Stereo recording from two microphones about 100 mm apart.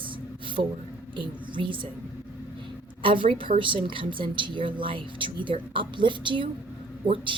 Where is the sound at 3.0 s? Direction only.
60° right (ahead or behind).